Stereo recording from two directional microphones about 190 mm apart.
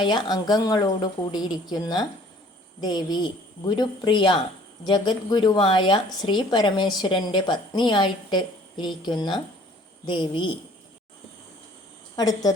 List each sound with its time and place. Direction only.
0.0 s a woman's voice: 20° left (ahead or behind)
12.1 s a woman's voice: 20° left (ahead or behind)